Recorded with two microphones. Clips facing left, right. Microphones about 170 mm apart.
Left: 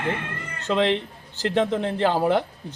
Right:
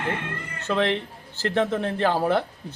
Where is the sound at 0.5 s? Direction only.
15° left (ahead or behind).